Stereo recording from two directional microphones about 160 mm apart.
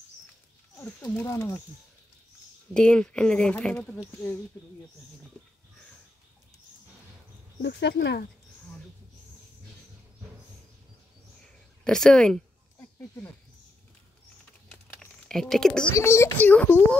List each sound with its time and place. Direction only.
0.7 s a child's voice: 10° left (ahead or behind)
1.3 s speech: 20° left (ahead or behind)
2.7 s speech: 5° left (ahead or behind)
5.4 s a sound: 5° left (ahead or behind)
7.6 s speech: 90° left
11.8 s speech: 5° left (ahead or behind)
14.7 s typing: 5° left (ahead or behind)
15.9 s a child's voice: 15° left (ahead or behind)